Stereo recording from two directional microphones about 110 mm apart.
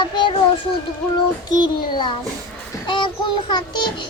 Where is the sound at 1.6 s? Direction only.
45° left (ahead or behind).